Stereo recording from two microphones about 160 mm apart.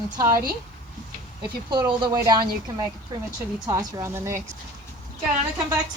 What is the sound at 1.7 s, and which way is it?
Speech, 30° right (ahead or behind).